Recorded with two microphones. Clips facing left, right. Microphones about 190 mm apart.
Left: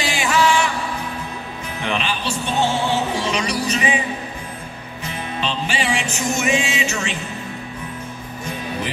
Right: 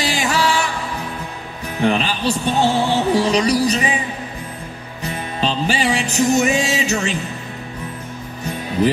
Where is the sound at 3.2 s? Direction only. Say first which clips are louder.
Right 7 dB; 35° right (ahead or behind).